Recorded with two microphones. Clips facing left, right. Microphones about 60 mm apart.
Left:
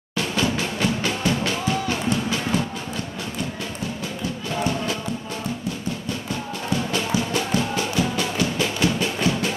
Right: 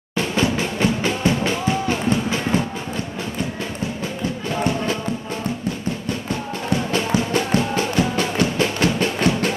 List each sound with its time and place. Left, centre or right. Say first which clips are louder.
0.2 s music: right 3 dB; right
6.7 s music: right 3 dB; right